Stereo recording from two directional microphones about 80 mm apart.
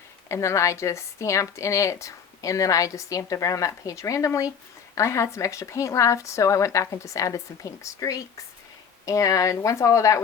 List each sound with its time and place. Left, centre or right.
0.3 s a woman's voice: left